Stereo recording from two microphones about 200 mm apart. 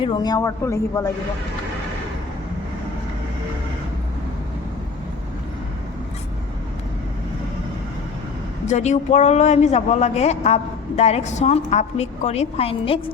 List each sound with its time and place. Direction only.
0.0 s a man's voice: 20° left (ahead or behind)
8.6 s speech: 35° left (ahead or behind)